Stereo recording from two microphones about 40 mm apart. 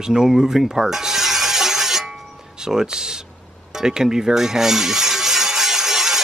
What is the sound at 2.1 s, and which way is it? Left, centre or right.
Music, centre.